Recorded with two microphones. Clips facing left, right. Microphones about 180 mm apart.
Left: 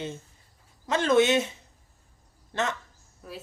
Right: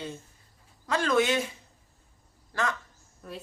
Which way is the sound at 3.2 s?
5° left (ahead or behind).